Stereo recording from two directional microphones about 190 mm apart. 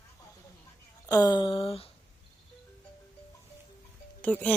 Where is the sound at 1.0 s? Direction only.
20° left (ahead or behind).